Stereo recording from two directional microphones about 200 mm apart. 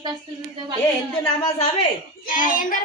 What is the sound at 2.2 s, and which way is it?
Speech, 40° left (ahead or behind).